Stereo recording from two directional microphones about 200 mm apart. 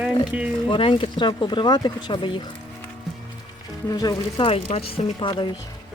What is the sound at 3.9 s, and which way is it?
Speech, 20° left (ahead or behind).